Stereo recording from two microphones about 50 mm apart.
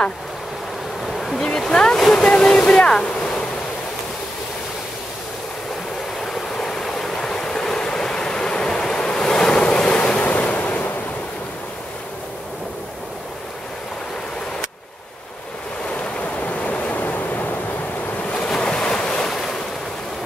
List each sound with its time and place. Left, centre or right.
1.0 s waterfall: centre
6.5 s stream: centre
10.2 s waves: left
16.3 s waves: left
18.5 s waves: centre